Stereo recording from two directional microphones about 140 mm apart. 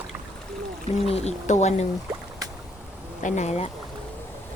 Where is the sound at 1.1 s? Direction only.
50° left (ahead or behind).